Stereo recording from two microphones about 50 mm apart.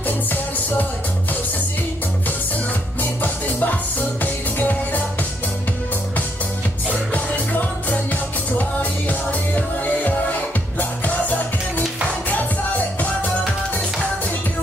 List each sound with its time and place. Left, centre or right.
0.0 s music: left
3.0 s music: left
6.9 s music: left